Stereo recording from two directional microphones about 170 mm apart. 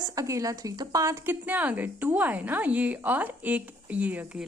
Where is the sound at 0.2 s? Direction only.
20° right (ahead or behind).